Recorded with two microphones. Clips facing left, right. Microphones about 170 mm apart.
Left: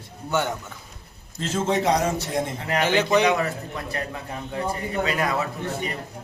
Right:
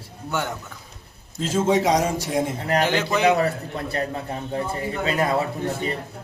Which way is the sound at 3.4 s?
35° right (ahead or behind).